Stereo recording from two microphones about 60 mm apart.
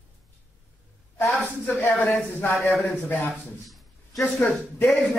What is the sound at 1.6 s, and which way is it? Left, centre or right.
Speech, left.